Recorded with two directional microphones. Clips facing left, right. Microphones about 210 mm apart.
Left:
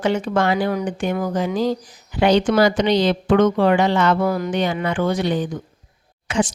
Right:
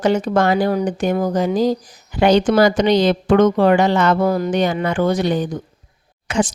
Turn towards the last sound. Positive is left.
turn(degrees=-45)  # may be behind; listen again after turning